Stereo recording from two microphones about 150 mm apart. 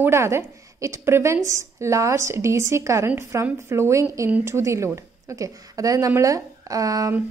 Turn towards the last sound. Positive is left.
turn(degrees=-25)  # may be behind; listen again after turning